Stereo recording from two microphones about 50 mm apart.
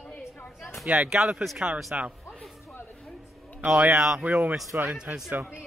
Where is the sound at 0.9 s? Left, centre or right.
Centre.